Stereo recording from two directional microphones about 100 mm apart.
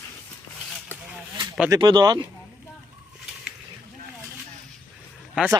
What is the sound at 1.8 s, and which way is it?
Speech, 45° right (ahead or behind).